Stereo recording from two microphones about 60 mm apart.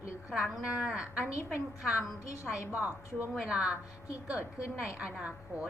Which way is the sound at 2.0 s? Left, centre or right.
Left.